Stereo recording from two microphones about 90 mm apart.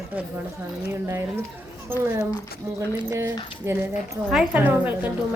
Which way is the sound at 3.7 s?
25° right (ahead or behind).